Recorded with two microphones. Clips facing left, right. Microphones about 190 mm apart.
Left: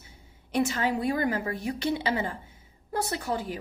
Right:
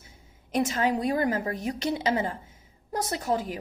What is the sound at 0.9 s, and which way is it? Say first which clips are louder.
A woman's voice: right 1 dB; 35° right (ahead or behind).